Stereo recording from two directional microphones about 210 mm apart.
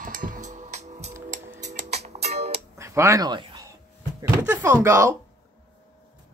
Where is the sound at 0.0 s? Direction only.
40° right (ahead or behind).